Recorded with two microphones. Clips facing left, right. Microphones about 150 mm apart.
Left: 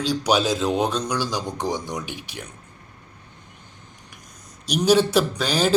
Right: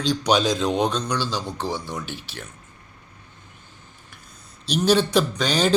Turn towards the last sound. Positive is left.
turn(degrees=5)  # may be behind; listen again after turning